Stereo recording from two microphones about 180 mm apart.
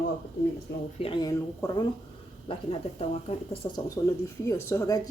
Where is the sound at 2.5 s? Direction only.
30° left (ahead or behind).